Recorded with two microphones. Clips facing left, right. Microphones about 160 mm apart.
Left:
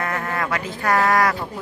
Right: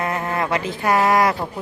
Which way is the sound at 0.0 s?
20° right (ahead or behind).